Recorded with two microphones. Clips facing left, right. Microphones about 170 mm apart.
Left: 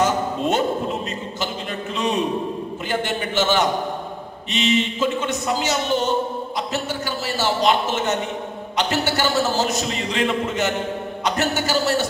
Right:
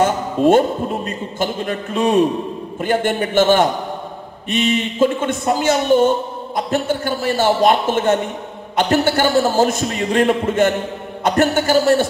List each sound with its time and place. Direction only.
0.5 s a man's voice: 50° right (ahead or behind)